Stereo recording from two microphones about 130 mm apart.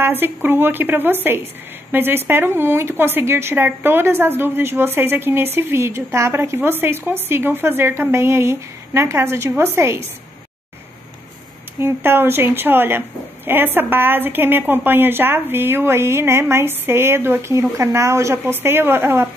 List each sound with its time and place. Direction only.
0.0 s a woman's voice: 15° right (ahead or behind)
11.8 s a woman's voice: 15° right (ahead or behind)